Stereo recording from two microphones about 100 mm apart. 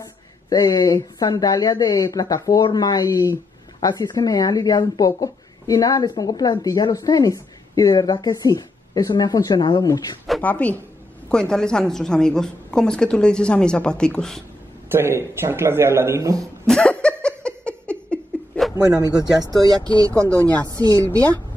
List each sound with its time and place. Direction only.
0.5 s speech: 35° left (ahead or behind)
10.4 s a woman's voice: 15° left (ahead or behind)
14.9 s speech: 25° right (ahead or behind)
16.6 s laughter: 10° left (ahead or behind)
18.9 s a woman's voice: 40° right (ahead or behind)
20.0 s a woman's voice: 30° right (ahead or behind)